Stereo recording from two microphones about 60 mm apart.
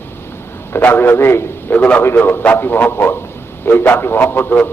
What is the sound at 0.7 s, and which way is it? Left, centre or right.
Speech, left.